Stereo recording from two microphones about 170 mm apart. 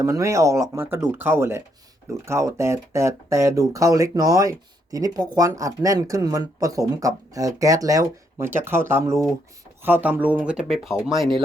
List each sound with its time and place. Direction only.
0.0 s speech: 15° right (ahead or behind); by 11.4 s centre (ahead or behind)